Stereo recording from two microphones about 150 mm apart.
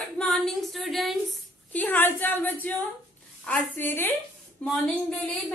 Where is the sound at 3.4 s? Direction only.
10° left (ahead or behind).